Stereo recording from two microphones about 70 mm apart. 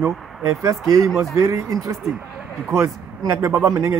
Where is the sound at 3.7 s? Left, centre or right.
Right.